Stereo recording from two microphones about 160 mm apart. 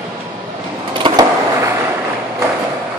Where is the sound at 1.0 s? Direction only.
30° right (ahead or behind).